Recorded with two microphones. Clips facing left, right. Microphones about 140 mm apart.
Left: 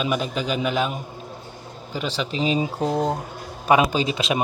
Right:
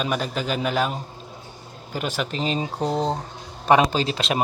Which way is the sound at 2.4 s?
5° left (ahead or behind).